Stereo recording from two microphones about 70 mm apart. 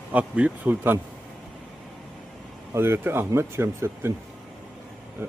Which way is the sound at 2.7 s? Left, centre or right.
Right.